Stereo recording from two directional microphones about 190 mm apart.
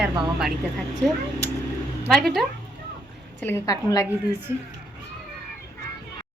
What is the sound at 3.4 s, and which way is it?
Speech, 15° left (ahead or behind).